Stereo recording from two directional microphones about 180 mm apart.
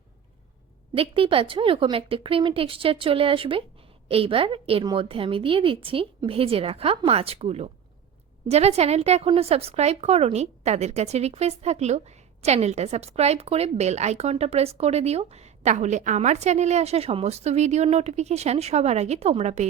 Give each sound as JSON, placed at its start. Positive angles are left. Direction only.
{"t": 0.9, "sound": "speech", "side_deg": -30}